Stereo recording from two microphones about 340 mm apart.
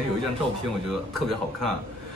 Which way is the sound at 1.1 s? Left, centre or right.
Centre.